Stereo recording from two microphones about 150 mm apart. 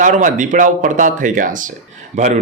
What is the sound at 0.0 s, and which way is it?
A man's voice, 60° right (ahead or behind).